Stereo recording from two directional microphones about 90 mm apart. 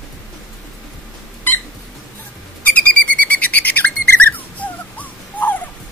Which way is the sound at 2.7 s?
15° left (ahead or behind).